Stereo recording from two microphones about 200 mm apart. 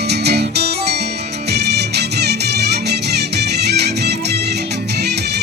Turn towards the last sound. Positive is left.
turn(degrees=-55)  # may be behind; listen again after turning